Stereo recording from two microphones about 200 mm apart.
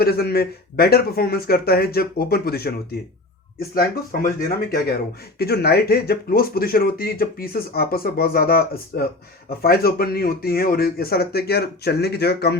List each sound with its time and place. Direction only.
0.0 s speech: 50° left (ahead or behind)
5.4 s speech: 50° left (ahead or behind)